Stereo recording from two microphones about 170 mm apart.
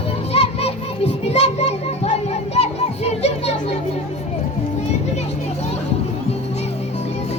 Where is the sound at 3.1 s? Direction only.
40° left (ahead or behind).